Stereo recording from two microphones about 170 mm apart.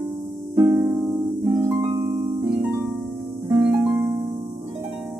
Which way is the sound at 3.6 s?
15° right (ahead or behind).